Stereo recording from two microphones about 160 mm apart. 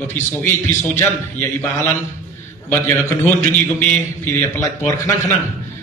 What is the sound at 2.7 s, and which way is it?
A man's voice, 15° left (ahead or behind).